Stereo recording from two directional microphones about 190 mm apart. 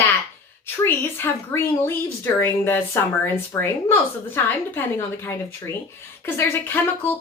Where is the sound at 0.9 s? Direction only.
10° left (ahead or behind).